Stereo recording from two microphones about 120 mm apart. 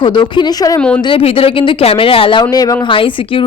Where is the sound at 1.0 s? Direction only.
50° left (ahead or behind).